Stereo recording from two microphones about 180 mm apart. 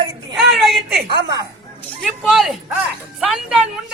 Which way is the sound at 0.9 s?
60° right (ahead or behind).